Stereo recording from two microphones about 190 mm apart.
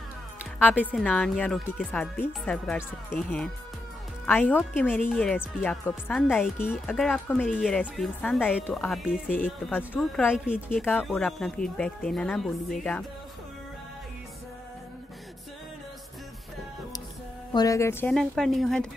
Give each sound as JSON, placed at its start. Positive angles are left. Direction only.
{"t": 0.6, "sound": "speech", "side_deg": 10}
{"t": 17.5, "sound": "speech", "side_deg": 20}
{"t": 18.1, "sound": "speech", "side_deg": 0}